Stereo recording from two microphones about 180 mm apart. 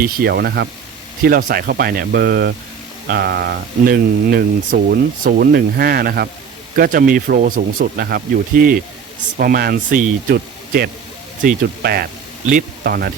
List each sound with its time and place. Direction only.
0.0 s speech: 60° right (ahead or behind)
1.2 s speech: 50° right (ahead or behind)